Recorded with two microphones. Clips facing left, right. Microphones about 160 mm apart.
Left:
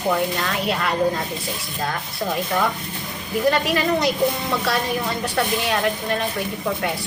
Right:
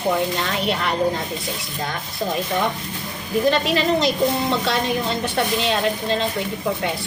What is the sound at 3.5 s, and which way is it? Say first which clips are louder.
A woman's voice: even; 20° right (ahead or behind).